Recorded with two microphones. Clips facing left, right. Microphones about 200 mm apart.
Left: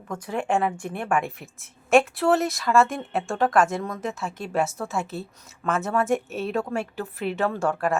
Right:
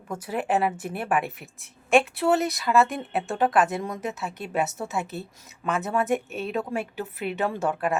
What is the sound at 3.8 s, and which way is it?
Speech, 20° right (ahead or behind).